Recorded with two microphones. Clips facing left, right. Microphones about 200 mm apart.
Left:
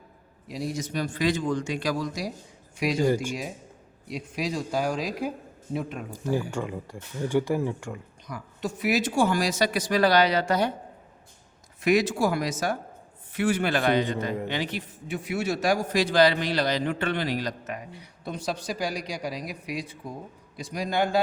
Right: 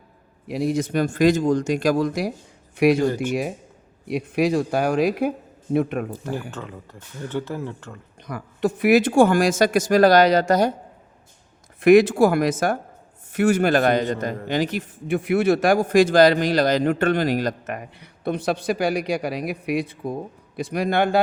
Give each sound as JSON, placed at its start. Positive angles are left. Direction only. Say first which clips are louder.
{"t": 0.4, "sound": "a man's voice", "louder": "right 9 dB", "side_deg": -60}
{"t": 4.1, "sound": "a man's voice", "louder": "right 10 dB", "side_deg": -60}
{"t": 6.5, "sound": "speech", "louder": "left 4 dB", "side_deg": 10}
{"t": 8.2, "sound": "speech", "louder": "right 10 dB", "side_deg": -60}
{"t": 11.8, "sound": "a man's voice", "louder": "right 9 dB", "side_deg": -55}